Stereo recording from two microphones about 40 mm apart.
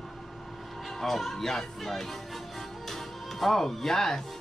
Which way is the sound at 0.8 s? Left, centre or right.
Centre.